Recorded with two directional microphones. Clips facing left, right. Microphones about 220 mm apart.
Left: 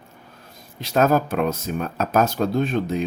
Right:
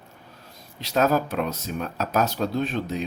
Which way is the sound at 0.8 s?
50° left (ahead or behind).